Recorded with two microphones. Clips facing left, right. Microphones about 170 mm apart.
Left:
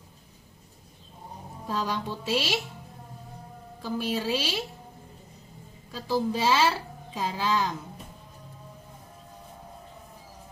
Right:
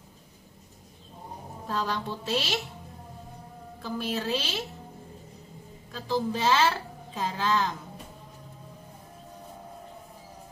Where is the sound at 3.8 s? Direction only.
10° left (ahead or behind).